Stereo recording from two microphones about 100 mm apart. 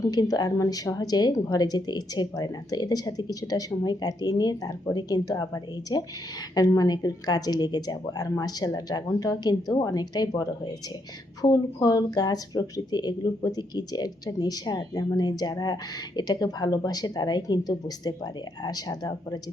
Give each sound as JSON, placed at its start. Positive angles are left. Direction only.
{"t": 0.1, "sound": "speech", "side_deg": 40}